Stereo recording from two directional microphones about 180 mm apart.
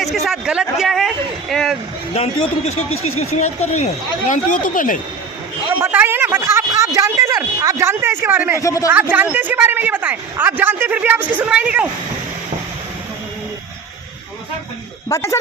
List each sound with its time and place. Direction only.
0.0 s a sound: centre (ahead or behind)
2.1 s speech: 35° left (ahead or behind)
5.8 s speech: 10° right (ahead or behind)
8.6 s speech: 20° left (ahead or behind)
8.9 s speech: 10° right (ahead or behind)
15.1 s speech: 15° left (ahead or behind)